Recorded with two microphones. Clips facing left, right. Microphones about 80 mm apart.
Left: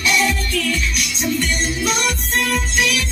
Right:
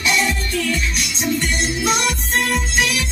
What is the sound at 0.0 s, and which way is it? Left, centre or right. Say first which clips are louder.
Music: left 1 dB; right.